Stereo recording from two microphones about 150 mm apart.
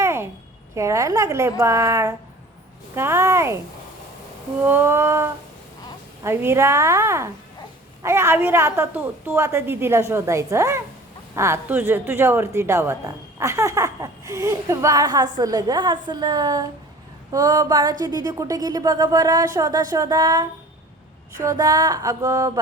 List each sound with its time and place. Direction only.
0.0 s a sound: 15° right (ahead or behind)
0.8 s a woman's voice: 20° right (ahead or behind)
4.6 s a woman's voice: 15° right (ahead or behind)